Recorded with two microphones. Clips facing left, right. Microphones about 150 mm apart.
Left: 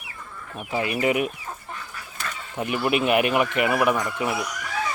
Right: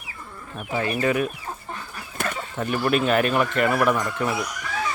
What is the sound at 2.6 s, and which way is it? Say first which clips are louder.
Speech: even; 15° left (ahead or behind).